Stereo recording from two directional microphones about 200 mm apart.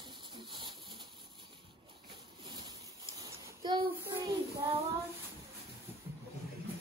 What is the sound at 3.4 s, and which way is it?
Child singing, 20° right (ahead or behind).